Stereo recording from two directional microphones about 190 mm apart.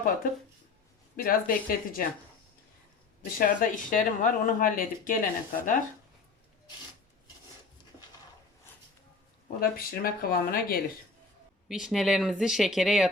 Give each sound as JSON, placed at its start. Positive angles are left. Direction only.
{"t": 1.1, "sound": "speech", "side_deg": 50}
{"t": 3.3, "sound": "speech", "side_deg": 45}
{"t": 9.6, "sound": "speech", "side_deg": 50}
{"t": 11.7, "sound": "speech", "side_deg": 0}